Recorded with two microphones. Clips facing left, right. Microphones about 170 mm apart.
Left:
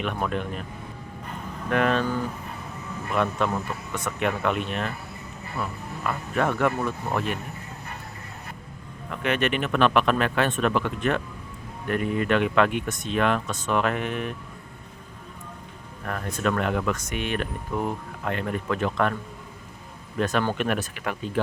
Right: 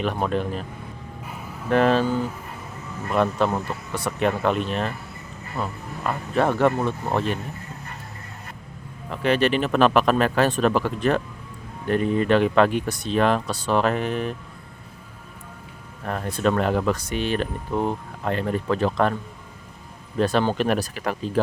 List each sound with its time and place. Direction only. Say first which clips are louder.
0.0 s speech: right 4 dB; 35° right (ahead or behind)
1.2 s a sound: left 2 dB; 10° right (ahead or behind)
1.7 s speech: right 4 dB; 30° right (ahead or behind)
3.2 s speech: right 4 dB; 35° right (ahead or behind)
9.0 s speech: right 4 dB; 35° right (ahead or behind)
16.0 s speech: right 4 dB; 30° right (ahead or behind)
20.1 s speech: right 4 dB; 30° right (ahead or behind)